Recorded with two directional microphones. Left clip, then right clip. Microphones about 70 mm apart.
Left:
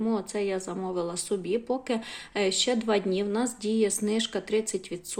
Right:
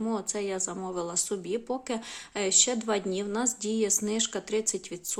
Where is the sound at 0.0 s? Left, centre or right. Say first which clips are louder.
Left 2 dB; right.